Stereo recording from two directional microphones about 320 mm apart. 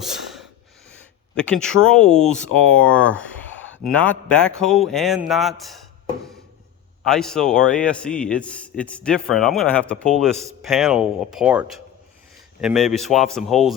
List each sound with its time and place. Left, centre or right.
0.0 s snort: centre
1.5 s a man's voice: centre
7.0 s a man's voice: centre